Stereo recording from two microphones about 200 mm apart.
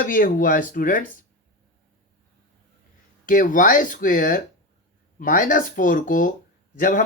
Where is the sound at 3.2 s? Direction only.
40° left (ahead or behind).